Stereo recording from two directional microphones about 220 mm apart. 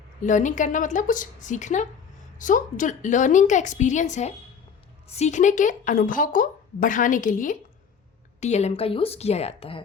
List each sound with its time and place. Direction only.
0.2 s a woman's voice: 35° left (ahead or behind)